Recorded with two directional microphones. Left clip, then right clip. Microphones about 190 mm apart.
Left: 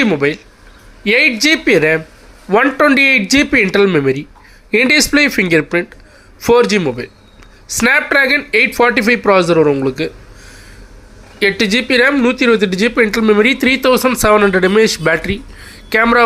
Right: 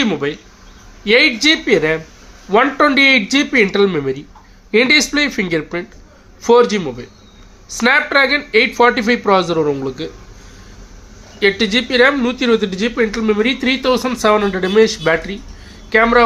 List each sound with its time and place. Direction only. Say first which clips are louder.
0.0 s speech: left 4 dB; 15° left (ahead or behind)
11.3 s speech: left 1 dB; 20° left (ahead or behind)